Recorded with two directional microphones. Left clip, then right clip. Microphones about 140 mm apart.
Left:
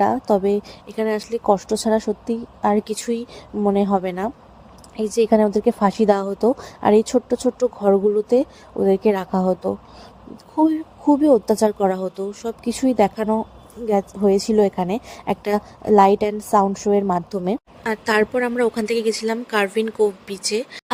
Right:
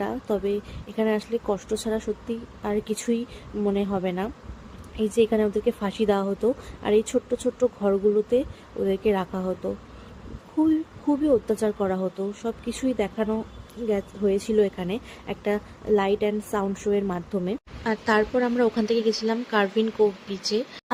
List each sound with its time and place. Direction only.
0.0 s speech: 45° left (ahead or behind)
11.2 s speech: 45° left (ahead or behind)
13.8 s a woman's voice: 35° left (ahead or behind)
16.5 s a woman's voice: 35° left (ahead or behind)
17.8 s speech: 80° left